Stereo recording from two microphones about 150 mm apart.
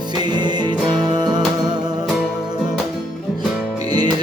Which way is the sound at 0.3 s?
30° right (ahead or behind).